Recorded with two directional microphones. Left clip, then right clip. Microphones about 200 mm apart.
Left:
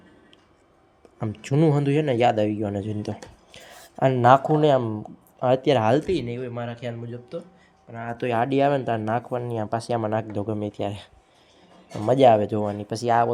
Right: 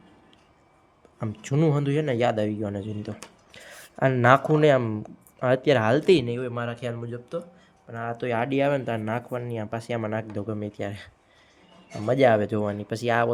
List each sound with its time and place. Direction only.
1.2 s a man's voice: 5° left (ahead or behind)
8.1 s a man's voice: 5° left (ahead or behind)